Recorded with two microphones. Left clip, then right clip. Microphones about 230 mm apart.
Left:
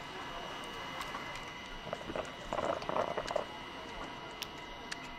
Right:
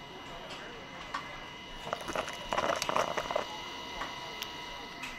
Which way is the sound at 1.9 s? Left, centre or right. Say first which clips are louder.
Right 5 dB; right.